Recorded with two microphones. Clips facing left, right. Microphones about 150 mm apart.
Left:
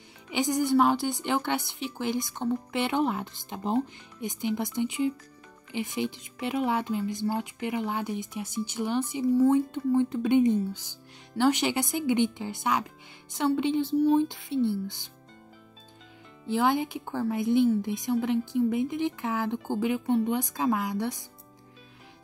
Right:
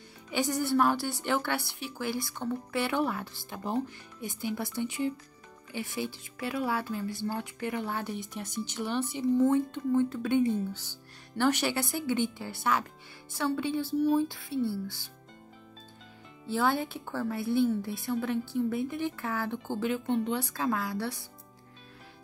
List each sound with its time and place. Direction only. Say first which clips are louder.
0.3 s speech: left 3 dB; 15° left (ahead or behind)
16.4 s speech: left 3 dB; 15° left (ahead or behind)